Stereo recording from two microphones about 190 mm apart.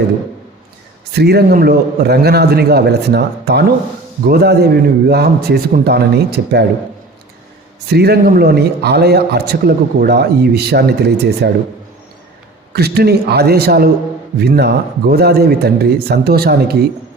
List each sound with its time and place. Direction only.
1.1 s a man's voice: 60° right (ahead or behind)
7.9 s a man's voice: 55° right (ahead or behind)
12.7 s a man's voice: 55° right (ahead or behind)